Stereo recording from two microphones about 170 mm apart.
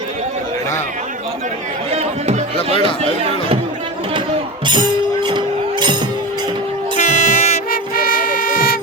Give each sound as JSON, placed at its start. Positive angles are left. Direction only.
{"t": 1.9, "sound": "music", "side_deg": -40}
{"t": 4.6, "sound": "music", "side_deg": -25}
{"t": 7.0, "sound": "music", "side_deg": 45}